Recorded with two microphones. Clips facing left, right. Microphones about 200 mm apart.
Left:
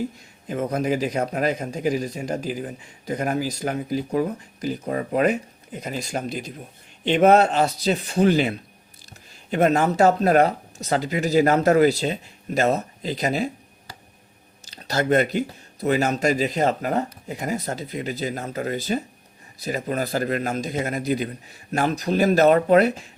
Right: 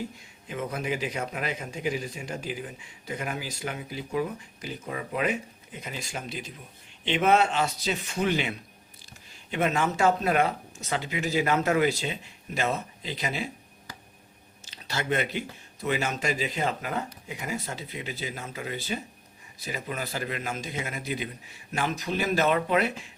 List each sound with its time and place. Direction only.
0.4 s a man's voice: 40° left (ahead or behind)
14.6 s a man's voice: 40° left (ahead or behind)